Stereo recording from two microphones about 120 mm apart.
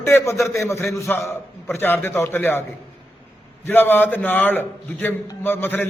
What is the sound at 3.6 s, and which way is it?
A man's voice, 15° left (ahead or behind).